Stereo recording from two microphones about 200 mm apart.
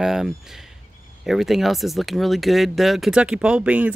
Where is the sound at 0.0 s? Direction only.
Centre (ahead or behind).